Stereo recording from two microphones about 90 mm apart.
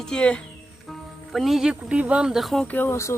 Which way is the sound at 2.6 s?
20° left (ahead or behind).